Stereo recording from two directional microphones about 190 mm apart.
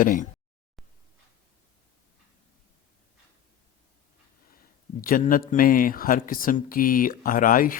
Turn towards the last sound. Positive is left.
turn(degrees=45)  # may be behind; listen again after turning